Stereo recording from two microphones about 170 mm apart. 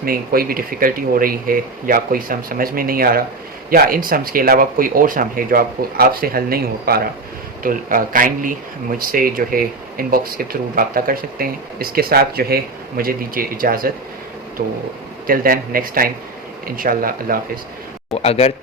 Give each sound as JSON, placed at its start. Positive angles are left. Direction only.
{"t": 0.0, "sound": "speech", "side_deg": -60}
{"t": 18.1, "sound": "a man's voice", "side_deg": 40}